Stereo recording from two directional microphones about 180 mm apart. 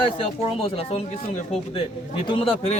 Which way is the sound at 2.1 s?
30° left (ahead or behind).